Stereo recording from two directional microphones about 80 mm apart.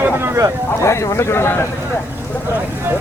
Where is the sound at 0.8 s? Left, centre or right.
Left.